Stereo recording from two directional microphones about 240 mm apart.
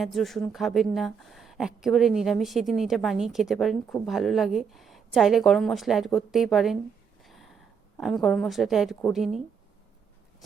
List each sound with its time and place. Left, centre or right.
0.0 s speech: centre
7.3 s a sound: centre
7.9 s speech: centre